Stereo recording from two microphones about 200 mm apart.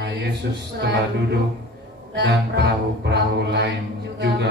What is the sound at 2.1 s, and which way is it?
Music, 55° right (ahead or behind).